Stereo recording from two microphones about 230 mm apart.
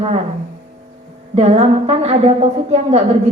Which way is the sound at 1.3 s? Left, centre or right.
Right.